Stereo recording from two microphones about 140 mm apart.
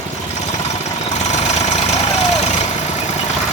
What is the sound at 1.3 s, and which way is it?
Engine, 55° left (ahead or behind).